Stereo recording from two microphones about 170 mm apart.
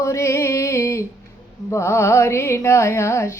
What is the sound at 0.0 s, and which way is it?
Music, 15° left (ahead or behind).